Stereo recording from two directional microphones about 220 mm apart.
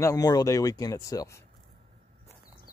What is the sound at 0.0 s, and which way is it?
Speech, 15° left (ahead or behind).